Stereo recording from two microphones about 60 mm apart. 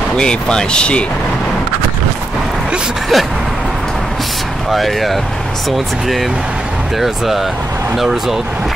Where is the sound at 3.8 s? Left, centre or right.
Centre.